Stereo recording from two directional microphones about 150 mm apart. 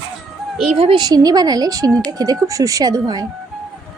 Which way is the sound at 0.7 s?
40° right (ahead or behind).